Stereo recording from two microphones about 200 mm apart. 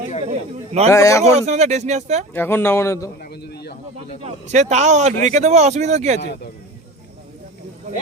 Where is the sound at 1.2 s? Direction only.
35° right (ahead or behind).